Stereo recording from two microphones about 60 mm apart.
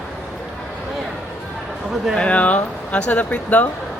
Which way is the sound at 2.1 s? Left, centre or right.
Centre.